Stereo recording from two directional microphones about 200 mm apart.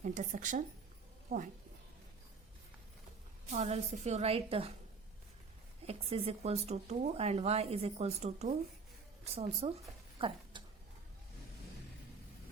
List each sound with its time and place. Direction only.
0.0 s speech: 40° right (ahead or behind)
3.5 s speech: 35° right (ahead or behind)
5.8 s speech: 30° right (ahead or behind)
10.2 s a sound: 25° right (ahead or behind)